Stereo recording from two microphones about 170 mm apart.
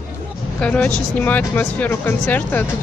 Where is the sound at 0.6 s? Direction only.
5° left (ahead or behind).